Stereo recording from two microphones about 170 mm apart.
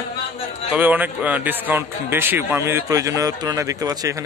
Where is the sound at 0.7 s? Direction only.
10° right (ahead or behind).